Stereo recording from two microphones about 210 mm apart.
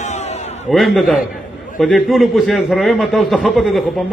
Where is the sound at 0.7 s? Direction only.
Centre (ahead or behind).